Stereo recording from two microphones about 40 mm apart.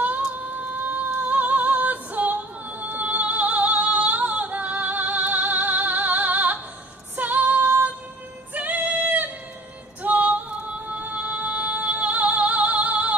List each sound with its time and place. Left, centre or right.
0.4 s a sound: right
1.2 s music: right
7.2 s female singing: right
8.5 s music: right